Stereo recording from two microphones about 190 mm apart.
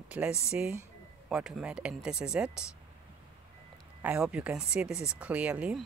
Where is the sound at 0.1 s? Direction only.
5° right (ahead or behind).